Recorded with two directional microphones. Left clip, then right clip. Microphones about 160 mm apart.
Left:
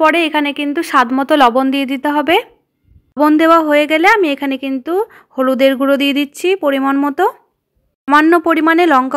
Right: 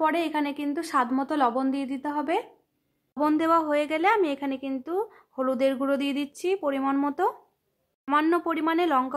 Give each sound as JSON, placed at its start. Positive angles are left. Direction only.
{"t": 0.0, "sound": "a woman's voice", "side_deg": 30}